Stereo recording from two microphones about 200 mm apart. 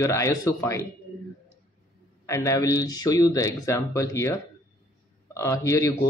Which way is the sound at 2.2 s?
15° left (ahead or behind).